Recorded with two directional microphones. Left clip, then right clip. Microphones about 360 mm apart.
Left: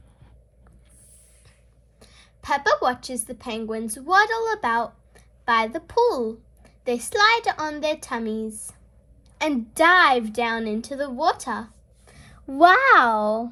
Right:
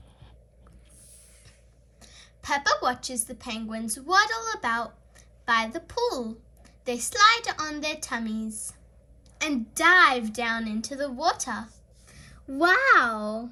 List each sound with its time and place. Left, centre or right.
0.2 s a sound: centre
2.0 s a woman's voice: centre
10.0 s a woman's voice: centre